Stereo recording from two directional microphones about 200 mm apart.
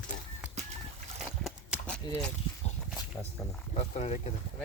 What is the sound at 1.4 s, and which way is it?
Clip-clop, 5° left (ahead or behind).